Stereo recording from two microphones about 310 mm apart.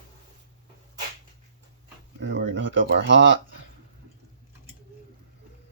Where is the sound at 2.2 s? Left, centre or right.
Right.